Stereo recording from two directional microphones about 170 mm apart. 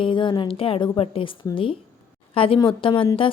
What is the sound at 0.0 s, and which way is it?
A woman's voice, 30° left (ahead or behind).